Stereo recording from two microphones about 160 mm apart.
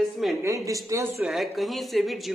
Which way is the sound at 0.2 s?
Centre (ahead or behind).